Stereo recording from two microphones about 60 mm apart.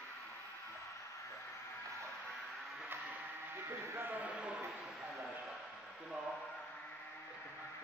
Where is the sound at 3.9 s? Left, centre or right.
Right.